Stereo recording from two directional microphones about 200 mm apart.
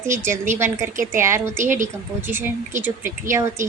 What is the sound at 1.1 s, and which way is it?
A woman's voice, 15° right (ahead or behind).